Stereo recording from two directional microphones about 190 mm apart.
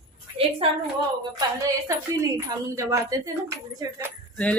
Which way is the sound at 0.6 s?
30° right (ahead or behind).